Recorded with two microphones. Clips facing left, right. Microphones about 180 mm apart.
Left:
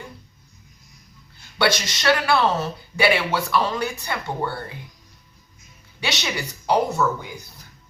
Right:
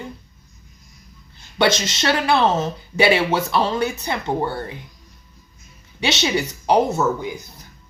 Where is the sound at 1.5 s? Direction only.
20° right (ahead or behind).